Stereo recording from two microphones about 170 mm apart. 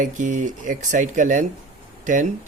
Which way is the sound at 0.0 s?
50° right (ahead or behind).